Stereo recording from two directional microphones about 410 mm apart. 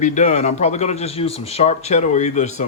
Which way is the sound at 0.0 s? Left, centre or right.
Centre.